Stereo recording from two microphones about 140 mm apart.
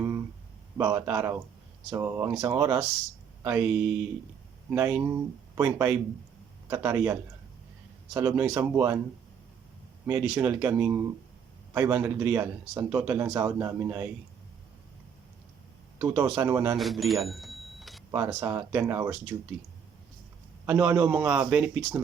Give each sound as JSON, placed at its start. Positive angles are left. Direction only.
{"t": 0.8, "sound": "speech", "side_deg": -20}
{"t": 10.1, "sound": "speech", "side_deg": -10}
{"t": 16.0, "sound": "speech", "side_deg": -15}
{"t": 16.7, "sound": "cash register", "side_deg": 0}
{"t": 18.1, "sound": "speech", "side_deg": -20}
{"t": 20.7, "sound": "speech", "side_deg": -15}